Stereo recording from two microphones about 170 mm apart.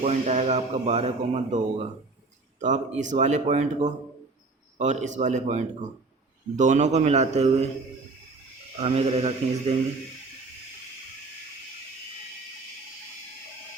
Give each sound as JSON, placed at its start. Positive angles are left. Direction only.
{"t": 0.0, "sound": "a man's voice", "side_deg": -40}
{"t": 8.7, "sound": "a man's voice", "side_deg": -35}